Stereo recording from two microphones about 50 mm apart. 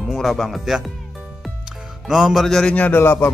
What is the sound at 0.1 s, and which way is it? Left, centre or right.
Speech, centre.